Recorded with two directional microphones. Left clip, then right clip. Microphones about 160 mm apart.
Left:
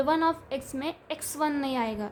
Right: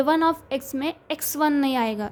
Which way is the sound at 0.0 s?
40° right (ahead or behind).